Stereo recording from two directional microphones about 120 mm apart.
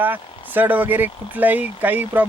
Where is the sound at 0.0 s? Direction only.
15° right (ahead or behind).